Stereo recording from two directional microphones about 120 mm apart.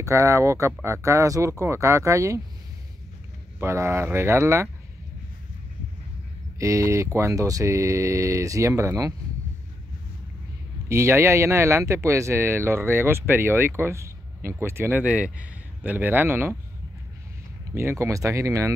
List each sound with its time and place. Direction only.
0.0 s speech: 25° right (ahead or behind)
3.5 s speech: 20° right (ahead or behind)
6.6 s speech: 25° right (ahead or behind)
10.9 s speech: 20° right (ahead or behind)
17.7 s speech: 25° right (ahead or behind)